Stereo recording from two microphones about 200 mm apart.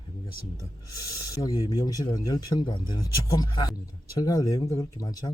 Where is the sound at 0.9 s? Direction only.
20° left (ahead or behind).